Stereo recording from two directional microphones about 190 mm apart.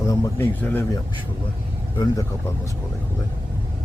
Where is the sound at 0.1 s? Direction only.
10° left (ahead or behind).